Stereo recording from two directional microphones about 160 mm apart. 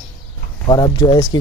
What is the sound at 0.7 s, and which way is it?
Speech, 25° left (ahead or behind).